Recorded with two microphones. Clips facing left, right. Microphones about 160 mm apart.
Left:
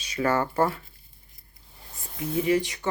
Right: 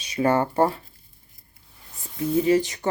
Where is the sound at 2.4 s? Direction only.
35° right (ahead or behind).